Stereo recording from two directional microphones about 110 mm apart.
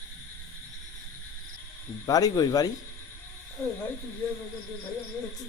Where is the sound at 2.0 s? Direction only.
35° left (ahead or behind).